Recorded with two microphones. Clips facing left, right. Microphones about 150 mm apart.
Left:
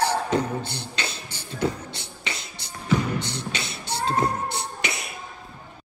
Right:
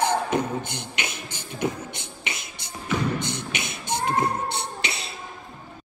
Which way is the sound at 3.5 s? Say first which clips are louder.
Right 1 dB; 20° right (ahead or behind).